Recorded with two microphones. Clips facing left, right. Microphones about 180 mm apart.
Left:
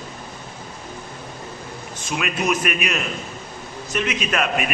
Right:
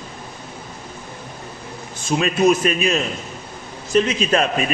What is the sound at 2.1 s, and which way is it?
A man's voice, 30° right (ahead or behind).